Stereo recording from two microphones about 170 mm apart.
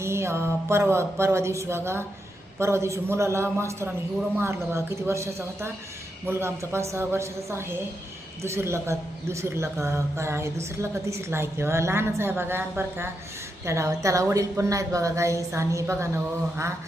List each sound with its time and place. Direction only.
0.0 s a woman's voice: 15° right (ahead or behind)